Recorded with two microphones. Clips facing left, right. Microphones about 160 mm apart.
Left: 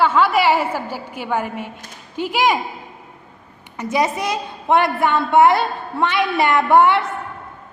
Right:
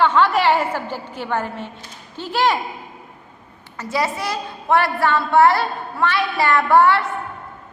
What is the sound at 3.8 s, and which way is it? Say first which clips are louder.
A woman's voice: left 3 dB; 20° left (ahead or behind).